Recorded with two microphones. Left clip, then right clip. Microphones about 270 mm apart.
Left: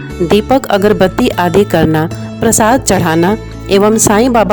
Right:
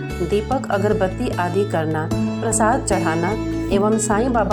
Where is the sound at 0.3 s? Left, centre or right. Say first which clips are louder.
Left 10 dB; left.